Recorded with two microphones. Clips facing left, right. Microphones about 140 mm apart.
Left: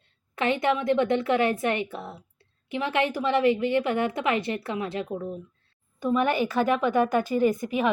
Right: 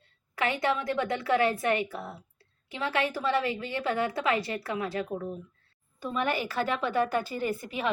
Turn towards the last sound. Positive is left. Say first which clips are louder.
# left 8 dB
turn(degrees=15)  # may be behind; listen again after turning